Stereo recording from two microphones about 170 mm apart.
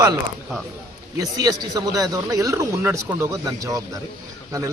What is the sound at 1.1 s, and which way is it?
Speech, 20° right (ahead or behind).